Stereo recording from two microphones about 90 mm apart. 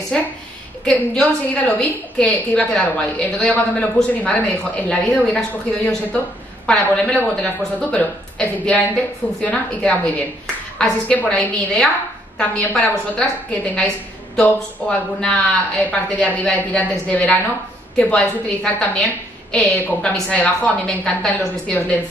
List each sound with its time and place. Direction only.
0.1 s a woman's voice: 10° left (ahead or behind)
17.1 s a woman's voice: 15° left (ahead or behind)